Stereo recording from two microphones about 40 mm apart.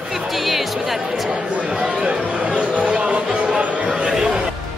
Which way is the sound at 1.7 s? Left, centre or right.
Right.